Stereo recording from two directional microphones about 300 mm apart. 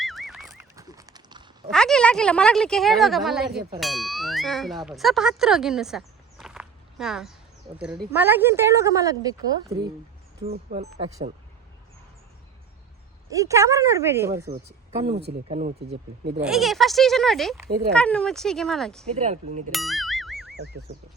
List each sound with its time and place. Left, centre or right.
0.0 s livestock: centre
0.8 s dog: centre
1.7 s a woman's voice: centre
3.4 s speech: right
3.8 s speech: centre
10.5 s speech: right
13.3 s speech: centre
14.7 s speech: right
16.4 s a woman's voice: centre
19.0 s speech: right
19.7 s music: centre